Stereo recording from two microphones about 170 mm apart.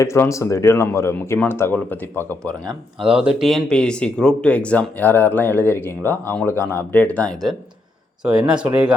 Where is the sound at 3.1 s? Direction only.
5° right (ahead or behind).